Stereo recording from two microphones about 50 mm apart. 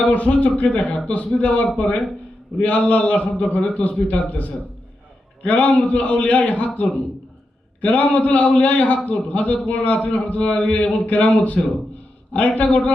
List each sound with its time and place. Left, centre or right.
0.0 s a man's voice: left
2.6 s a man's voice: left
3.4 s a man's voice: left
7.8 s a man's voice: left